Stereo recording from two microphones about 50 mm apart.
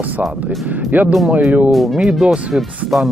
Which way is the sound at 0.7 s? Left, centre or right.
Right.